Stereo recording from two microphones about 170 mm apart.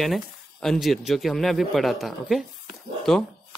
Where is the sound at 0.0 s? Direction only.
Centre (ahead or behind).